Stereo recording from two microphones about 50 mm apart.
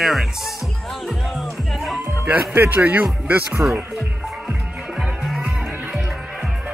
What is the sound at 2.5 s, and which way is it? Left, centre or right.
Speech, right.